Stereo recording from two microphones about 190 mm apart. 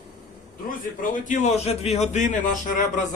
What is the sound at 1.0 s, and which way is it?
A man's voice, 40° left (ahead or behind).